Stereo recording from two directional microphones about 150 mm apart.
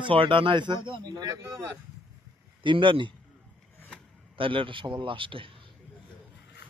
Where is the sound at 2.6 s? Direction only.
35° right (ahead or behind).